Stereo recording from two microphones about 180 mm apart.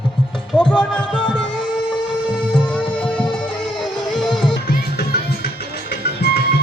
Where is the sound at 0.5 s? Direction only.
5° left (ahead or behind).